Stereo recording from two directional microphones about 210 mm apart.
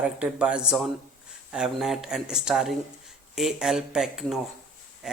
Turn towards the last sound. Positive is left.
turn(degrees=-5)  # may be behind; listen again after turning